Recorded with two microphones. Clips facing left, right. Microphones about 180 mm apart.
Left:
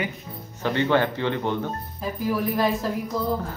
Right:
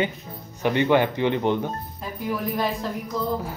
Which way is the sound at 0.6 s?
15° right (ahead or behind).